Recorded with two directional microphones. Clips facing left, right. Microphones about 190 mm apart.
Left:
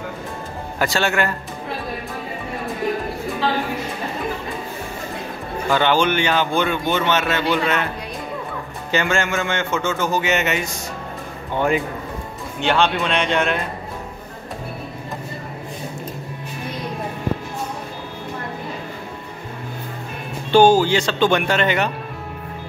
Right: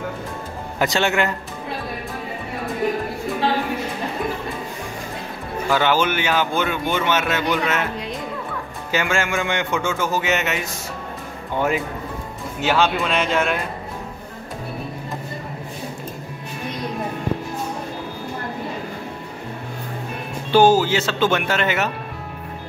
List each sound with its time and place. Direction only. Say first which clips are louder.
0.7 s a man's voice: right 1 dB; 20° right (ahead or behind)
5.7 s speech: left 1 dB; 5° right (ahead or behind)
8.9 s speech: left 1 dB; 5° right (ahead or behind)
20.5 s speech: left 2 dB; 5° right (ahead or behind)